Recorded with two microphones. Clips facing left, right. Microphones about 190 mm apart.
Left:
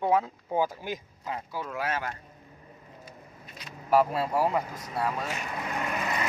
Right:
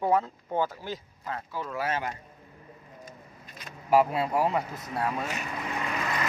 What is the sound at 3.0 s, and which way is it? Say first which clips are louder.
Vehicle: even; 50° right (ahead or behind).